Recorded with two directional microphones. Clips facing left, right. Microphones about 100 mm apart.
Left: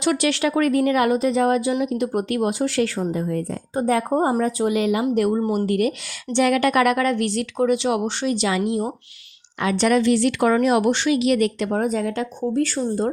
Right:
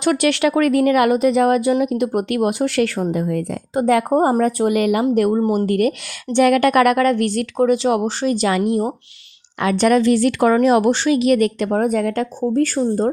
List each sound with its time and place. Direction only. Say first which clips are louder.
0.0 s speech: right 4 dB; 55° right (ahead or behind)